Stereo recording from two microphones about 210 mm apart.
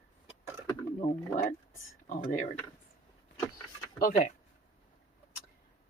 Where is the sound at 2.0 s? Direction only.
40° left (ahead or behind).